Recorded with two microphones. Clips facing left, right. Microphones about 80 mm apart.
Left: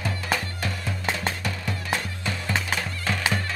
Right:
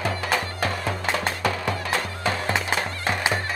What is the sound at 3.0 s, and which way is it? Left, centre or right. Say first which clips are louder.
Music: right 1 dB; right.